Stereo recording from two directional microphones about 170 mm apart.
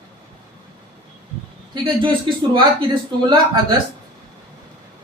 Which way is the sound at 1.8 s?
30° right (ahead or behind).